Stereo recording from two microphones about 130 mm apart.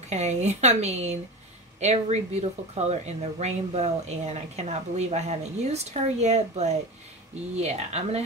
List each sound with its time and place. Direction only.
0.1 s speech: 60° right (ahead or behind)